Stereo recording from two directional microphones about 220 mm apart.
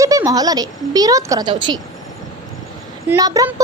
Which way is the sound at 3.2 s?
15° right (ahead or behind).